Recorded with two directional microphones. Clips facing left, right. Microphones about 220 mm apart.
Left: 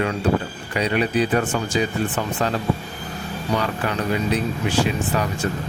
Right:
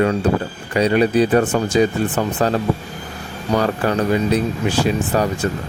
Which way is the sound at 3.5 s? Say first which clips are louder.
Right 6 dB; 40° right (ahead or behind).